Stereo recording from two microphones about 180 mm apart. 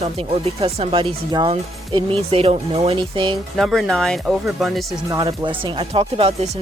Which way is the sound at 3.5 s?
Centre (ahead or behind).